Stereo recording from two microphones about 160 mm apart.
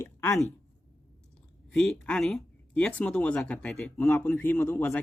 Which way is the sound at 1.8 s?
5° left (ahead or behind).